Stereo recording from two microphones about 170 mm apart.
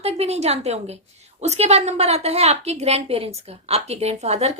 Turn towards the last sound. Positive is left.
turn(degrees=-40)  # may be behind; listen again after turning